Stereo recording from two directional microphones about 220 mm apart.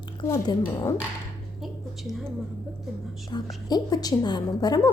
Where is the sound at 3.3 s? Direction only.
20° left (ahead or behind).